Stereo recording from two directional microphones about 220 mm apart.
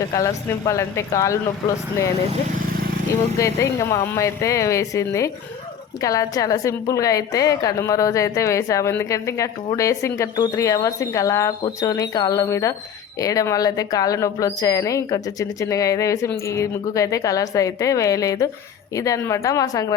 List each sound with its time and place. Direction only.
0.1 s a woman's voice: 15° left (ahead or behind)
2.6 s vehicle: 40° right (ahead or behind)
3.3 s a woman's voice: 15° left (ahead or behind)